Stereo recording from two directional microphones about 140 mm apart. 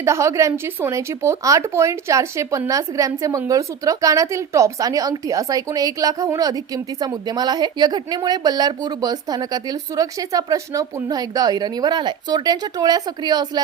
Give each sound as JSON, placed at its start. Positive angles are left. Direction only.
{"t": 0.0, "sound": "speech", "side_deg": -20}